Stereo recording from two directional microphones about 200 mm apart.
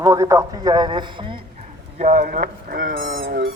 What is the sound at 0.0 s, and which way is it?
A man's voice, 15° right (ahead or behind).